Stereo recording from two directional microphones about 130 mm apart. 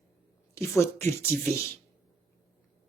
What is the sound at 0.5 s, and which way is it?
Speech, 20° left (ahead or behind).